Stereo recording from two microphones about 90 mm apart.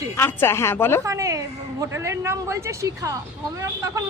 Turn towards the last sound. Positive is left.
turn(degrees=-35)  # may be behind; listen again after turning